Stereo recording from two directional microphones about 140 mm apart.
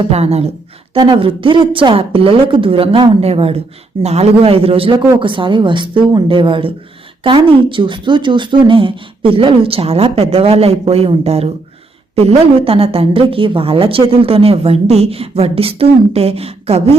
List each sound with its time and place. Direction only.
0.0 s a woman's voice: 45° right (ahead or behind)
0.9 s a woman's voice: 35° right (ahead or behind)